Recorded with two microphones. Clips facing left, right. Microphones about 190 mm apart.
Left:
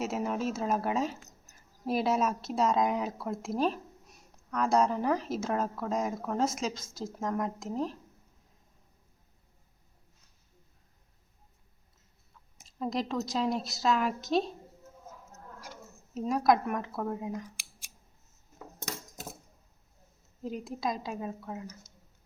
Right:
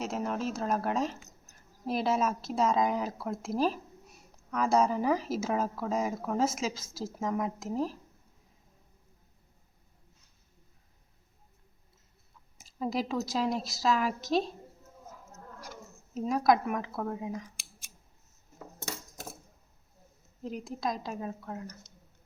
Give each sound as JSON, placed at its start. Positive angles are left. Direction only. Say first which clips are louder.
{"t": 0.0, "sound": "speech", "louder": "left 1 dB", "side_deg": 5}
{"t": 12.5, "sound": "speech", "louder": "right 1 dB", "side_deg": -5}
{"t": 16.1, "sound": "speech", "louder": "even", "side_deg": 0}
{"t": 18.8, "sound": "cutlery", "louder": "even", "side_deg": 15}
{"t": 20.4, "sound": "speech", "louder": "even", "side_deg": 0}